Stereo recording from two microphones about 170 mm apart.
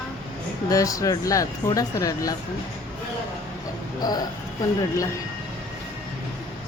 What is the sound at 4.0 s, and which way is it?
Speech, 25° left (ahead or behind).